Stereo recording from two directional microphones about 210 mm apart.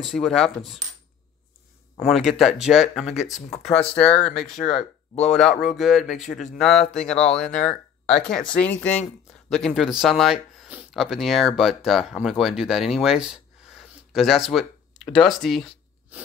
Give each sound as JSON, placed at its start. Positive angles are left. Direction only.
{"t": 0.0, "sound": "speech", "side_deg": 0}
{"t": 2.0, "sound": "speech", "side_deg": 0}
{"t": 4.6, "sound": "speech", "side_deg": 35}
{"t": 5.2, "sound": "speech", "side_deg": 5}